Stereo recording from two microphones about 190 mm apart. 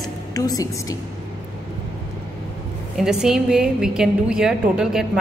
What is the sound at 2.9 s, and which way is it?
A woman's voice, 5° right (ahead or behind).